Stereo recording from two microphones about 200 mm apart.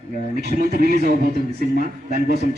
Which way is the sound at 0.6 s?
50° right (ahead or behind).